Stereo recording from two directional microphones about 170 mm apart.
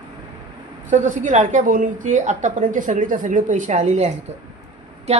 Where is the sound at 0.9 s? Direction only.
50° right (ahead or behind).